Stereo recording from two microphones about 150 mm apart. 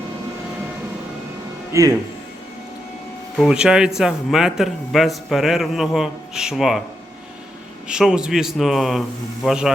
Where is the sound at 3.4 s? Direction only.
5° right (ahead or behind).